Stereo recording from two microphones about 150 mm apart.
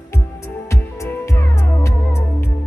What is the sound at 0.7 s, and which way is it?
Music, 20° left (ahead or behind).